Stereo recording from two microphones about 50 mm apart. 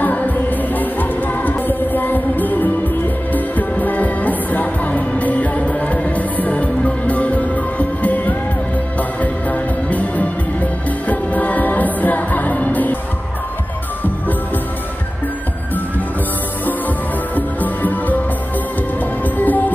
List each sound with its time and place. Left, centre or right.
0.0 s music: left
17.4 s music: left
19.2 s music: left